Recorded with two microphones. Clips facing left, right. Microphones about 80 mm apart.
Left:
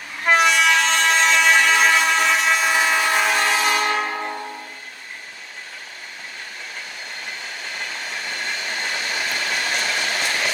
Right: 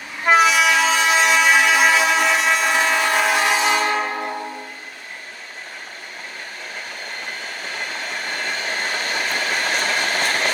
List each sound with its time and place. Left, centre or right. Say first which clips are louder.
0.3 s train: right 2 dB; centre
3.5 s train: right 1 dB; right
8.3 s train: right 3 dB; right